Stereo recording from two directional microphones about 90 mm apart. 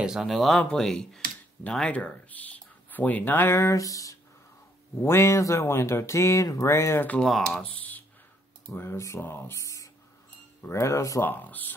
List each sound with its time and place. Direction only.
0.0 s speech: 5° right (ahead or behind); by 4.2 s 40° left (ahead or behind)
5.0 s speech: 30° left (ahead or behind)
7.2 s speech: centre (ahead or behind)
7.6 s speech: 15° left (ahead or behind)
8.7 s speech: 30° left (ahead or behind)
11.2 s speech: 20° left (ahead or behind)